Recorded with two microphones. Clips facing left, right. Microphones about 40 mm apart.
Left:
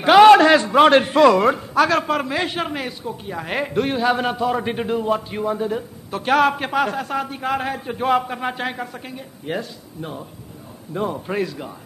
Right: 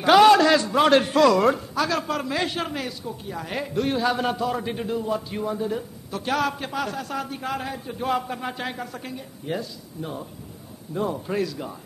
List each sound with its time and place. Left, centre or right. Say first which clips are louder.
0.0 s a man's voice: left 5 dB; left
1.8 s a man's voice: left 7 dB; left
3.9 s a man's voice: left 2 dB; left
4.6 s a man's voice: left 5 dB; left
5.3 s a man's voice: left 4 dB; left
7.7 s a man's voice: left 6 dB; left
8.1 s a man's voice: left 6 dB; left
8.9 s speech: left 1 dB; left
9.5 s a man's voice: left 3 dB; left